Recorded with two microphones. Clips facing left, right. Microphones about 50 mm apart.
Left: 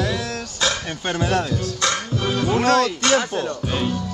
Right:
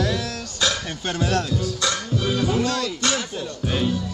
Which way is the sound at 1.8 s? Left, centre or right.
Left.